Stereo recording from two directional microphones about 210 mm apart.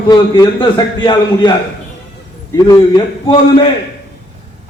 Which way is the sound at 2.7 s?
20° left (ahead or behind).